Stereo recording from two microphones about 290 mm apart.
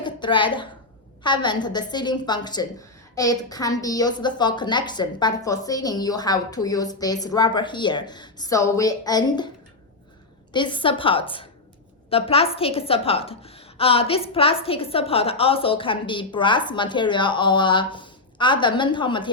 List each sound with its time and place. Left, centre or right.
0.0 s a sound: centre
1.2 s a woman's voice: centre
10.5 s a woman's voice: centre